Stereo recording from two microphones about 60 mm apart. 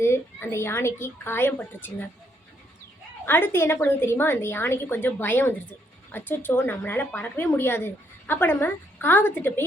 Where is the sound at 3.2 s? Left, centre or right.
Left.